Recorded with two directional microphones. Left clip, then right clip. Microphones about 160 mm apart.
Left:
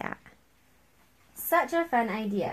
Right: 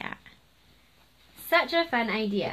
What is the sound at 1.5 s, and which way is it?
Speech, 30° left (ahead or behind).